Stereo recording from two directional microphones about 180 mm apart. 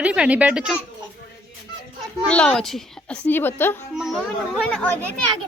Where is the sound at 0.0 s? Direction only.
5° right (ahead or behind).